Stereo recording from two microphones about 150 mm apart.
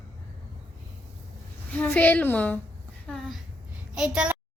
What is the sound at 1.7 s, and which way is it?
Speech, 10° left (ahead or behind).